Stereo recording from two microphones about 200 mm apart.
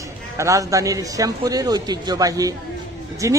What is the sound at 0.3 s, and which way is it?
Speech, 15° right (ahead or behind).